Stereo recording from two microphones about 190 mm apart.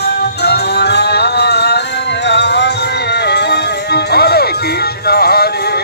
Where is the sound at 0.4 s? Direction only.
60° left (ahead or behind).